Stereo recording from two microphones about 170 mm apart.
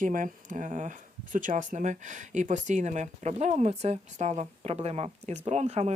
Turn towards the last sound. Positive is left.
turn(degrees=-40)  # may be behind; listen again after turning